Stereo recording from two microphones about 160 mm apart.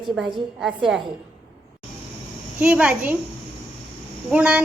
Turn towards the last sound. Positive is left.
turn(degrees=-5)  # may be behind; listen again after turning